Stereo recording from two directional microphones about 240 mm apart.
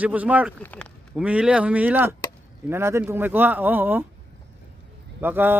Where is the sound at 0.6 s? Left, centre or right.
Centre.